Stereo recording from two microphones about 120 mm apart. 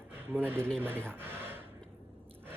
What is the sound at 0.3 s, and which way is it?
Speech, 15° right (ahead or behind).